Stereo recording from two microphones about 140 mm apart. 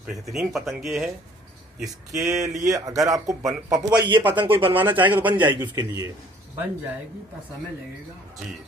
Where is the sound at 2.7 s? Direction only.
25° right (ahead or behind).